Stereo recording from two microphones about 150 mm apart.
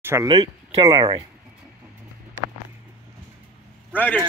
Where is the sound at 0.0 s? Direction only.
20° right (ahead or behind).